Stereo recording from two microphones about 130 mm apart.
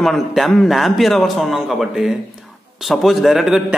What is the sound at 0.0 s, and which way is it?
A man's voice, centre (ahead or behind).